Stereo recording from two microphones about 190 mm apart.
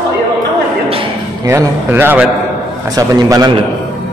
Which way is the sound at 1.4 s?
10° right (ahead or behind).